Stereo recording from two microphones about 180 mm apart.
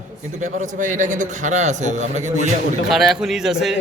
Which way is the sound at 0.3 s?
45° right (ahead or behind).